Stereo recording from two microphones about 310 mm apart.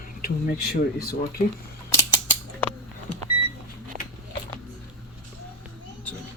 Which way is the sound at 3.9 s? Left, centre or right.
Right.